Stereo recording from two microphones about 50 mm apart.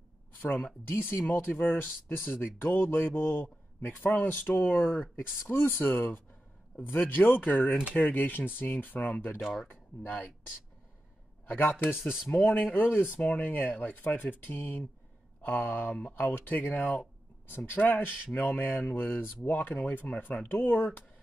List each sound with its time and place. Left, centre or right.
0.5 s speech: centre
0.9 s speech: left
5.4 s speech: left
9.4 s speech: centre
9.7 s speech: left
11.4 s speech: left
13.4 s speech: left
17.5 s speech: left
17.7 s speech: left